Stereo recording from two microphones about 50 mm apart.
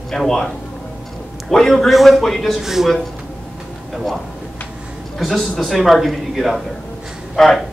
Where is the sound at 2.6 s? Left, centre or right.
Centre.